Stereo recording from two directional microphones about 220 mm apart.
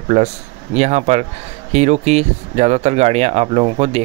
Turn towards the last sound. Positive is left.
turn(degrees=-25)  # may be behind; listen again after turning